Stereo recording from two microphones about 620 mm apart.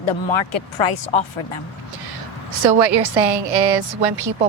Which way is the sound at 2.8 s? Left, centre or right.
Right.